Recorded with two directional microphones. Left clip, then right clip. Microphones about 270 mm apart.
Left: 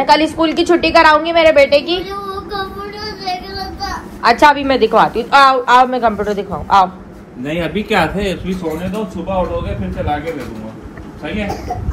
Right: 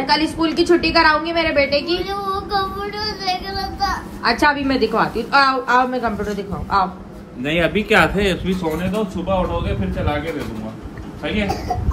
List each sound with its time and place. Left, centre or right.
0.0 s a woman's voice: centre
2.5 s a sound: centre
6.5 s a man's voice: centre
7.4 s a man's voice: centre
8.2 s a woman's voice: centre